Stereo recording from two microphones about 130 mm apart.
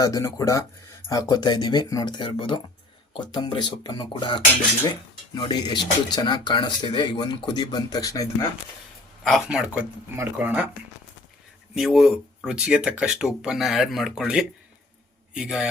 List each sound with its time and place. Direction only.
0.0 s speech: 25° left (ahead or behind)
9.2 s speech: centre (ahead or behind)
11.7 s speech: centre (ahead or behind)